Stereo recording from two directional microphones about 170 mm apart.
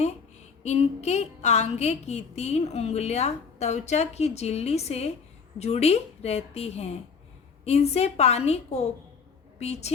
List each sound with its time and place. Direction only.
0.6 s a woman's voice: 40° left (ahead or behind)